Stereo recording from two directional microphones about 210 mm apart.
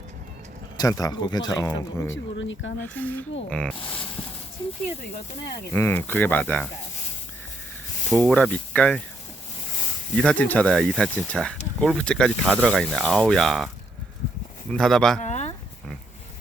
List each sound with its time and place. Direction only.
0.8 s speech: 15° left (ahead or behind)
2.0 s speech: 60° left (ahead or behind)
2.8 s speech: 10° left (ahead or behind)
5.7 s speech: 10° left (ahead or behind)
8.1 s speech: centre (ahead or behind)
10.2 s speech: 5° left (ahead or behind)
14.7 s speech: centre (ahead or behind)
15.2 s a sound: 35° left (ahead or behind)